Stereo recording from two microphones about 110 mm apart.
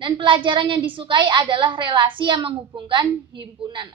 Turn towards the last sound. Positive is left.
turn(degrees=-45)  # may be behind; listen again after turning